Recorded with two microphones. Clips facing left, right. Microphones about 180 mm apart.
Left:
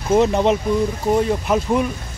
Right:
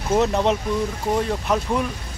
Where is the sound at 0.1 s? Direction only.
Centre (ahead or behind).